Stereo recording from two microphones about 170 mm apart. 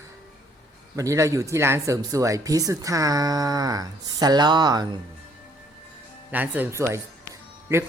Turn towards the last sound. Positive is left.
turn(degrees=-15)  # may be behind; listen again after turning